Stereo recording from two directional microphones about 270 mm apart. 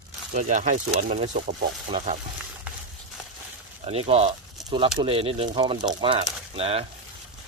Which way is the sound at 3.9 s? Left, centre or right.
Right.